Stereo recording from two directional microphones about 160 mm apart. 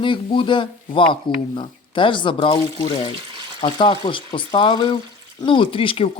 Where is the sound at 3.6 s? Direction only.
30° left (ahead or behind).